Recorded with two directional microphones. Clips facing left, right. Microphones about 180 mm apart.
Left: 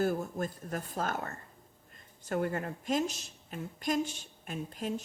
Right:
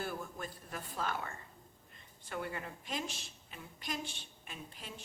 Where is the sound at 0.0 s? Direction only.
45° left (ahead or behind).